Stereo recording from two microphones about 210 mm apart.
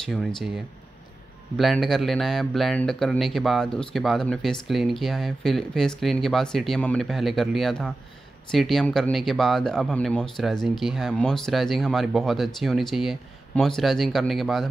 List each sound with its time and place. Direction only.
0.0 s speech: centre (ahead or behind)
1.6 s speech: centre (ahead or behind)